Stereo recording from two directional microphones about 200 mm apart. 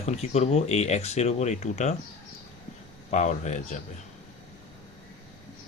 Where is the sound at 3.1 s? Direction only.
35° left (ahead or behind).